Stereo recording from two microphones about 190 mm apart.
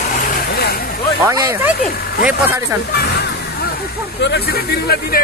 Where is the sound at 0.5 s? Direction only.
55° left (ahead or behind).